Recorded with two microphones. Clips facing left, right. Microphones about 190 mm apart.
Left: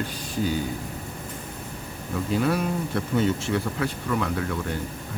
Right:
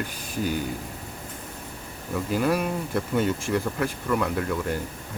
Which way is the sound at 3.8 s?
5° right (ahead or behind).